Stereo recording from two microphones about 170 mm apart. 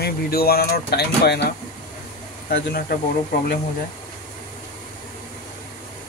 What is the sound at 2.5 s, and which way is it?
Speech, 65° left (ahead or behind).